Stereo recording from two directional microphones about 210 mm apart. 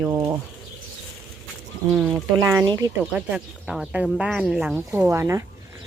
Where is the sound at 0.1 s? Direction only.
15° right (ahead or behind).